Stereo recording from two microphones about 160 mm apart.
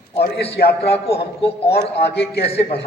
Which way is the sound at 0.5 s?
90° left.